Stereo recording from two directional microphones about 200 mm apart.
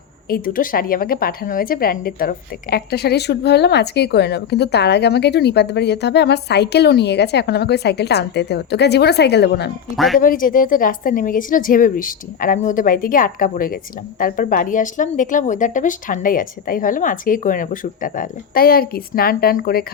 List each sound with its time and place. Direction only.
0.3 s a woman's voice: 45° left (ahead or behind)
9.9 s speech: centre (ahead or behind)
10.2 s speech: 45° left (ahead or behind)